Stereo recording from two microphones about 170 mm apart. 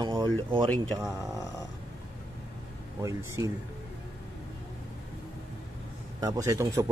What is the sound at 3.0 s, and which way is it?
Speech, 20° right (ahead or behind).